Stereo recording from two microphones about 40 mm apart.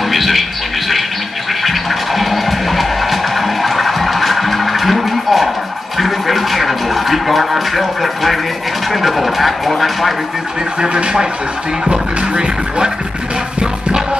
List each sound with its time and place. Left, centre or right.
0.1 s television: centre
1.6 s music: centre
5.9 s a sound: centre
10.8 s speech: centre
11.9 s music: right